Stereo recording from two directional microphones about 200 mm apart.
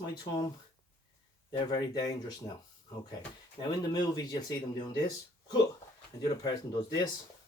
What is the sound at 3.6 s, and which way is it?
Speech, 20° left (ahead or behind).